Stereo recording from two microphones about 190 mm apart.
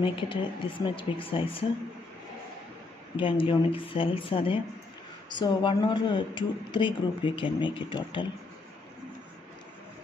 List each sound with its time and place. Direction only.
0.0 s speech: 25° left (ahead or behind)
3.2 s speech: 30° left (ahead or behind)